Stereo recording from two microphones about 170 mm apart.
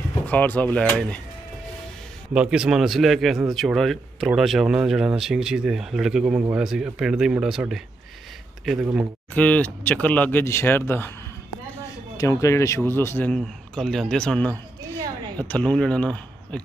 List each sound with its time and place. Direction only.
0.3 s a man's voice: 10° left (ahead or behind)
2.3 s speech: 5° right (ahead or behind)
9.3 s a man's voice: 10° left (ahead or behind)
12.2 s a man's voice: 20° left (ahead or behind)